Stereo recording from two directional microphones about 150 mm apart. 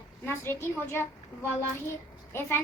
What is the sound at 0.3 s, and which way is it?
Child singing, 15° left (ahead or behind).